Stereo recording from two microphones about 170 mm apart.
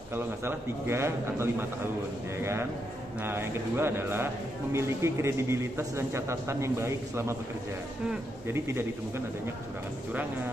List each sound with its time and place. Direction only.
0.1 s a man's voice: 15° right (ahead or behind)